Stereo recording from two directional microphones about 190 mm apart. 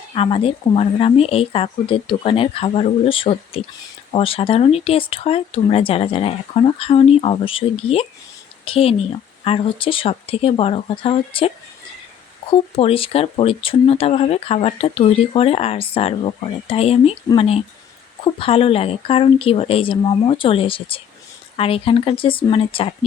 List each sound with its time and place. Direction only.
0.1 s speech: 30° left (ahead or behind)